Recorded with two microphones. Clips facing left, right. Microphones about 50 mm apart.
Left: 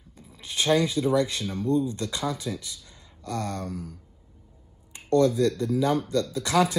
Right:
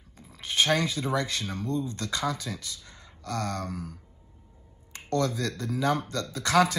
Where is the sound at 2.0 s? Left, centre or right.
Right.